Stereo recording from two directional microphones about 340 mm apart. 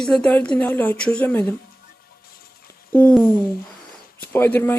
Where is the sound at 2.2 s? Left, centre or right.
Left.